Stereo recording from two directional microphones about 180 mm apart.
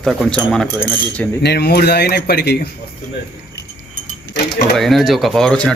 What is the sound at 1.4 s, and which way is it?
Speech, 65° left (ahead or behind).